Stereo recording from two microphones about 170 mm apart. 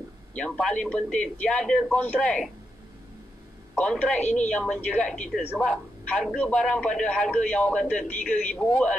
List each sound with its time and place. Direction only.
0.3 s speech: 5° left (ahead or behind)
3.7 s speech: 5° left (ahead or behind)
4.2 s a woman's voice: 45° left (ahead or behind)
4.5 s a man's voice: 5° left (ahead or behind)